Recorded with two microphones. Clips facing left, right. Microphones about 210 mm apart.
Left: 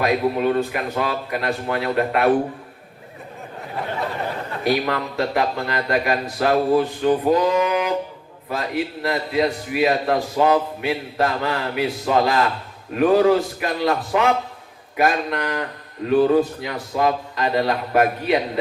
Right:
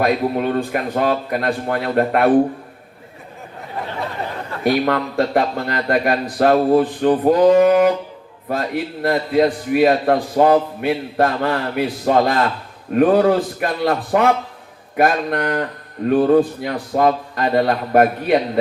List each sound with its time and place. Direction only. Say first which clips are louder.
0.0 s a man's voice: right 1 dB; 45° right (ahead or behind)
4.6 s a man's voice: right 4 dB; 50° right (ahead or behind)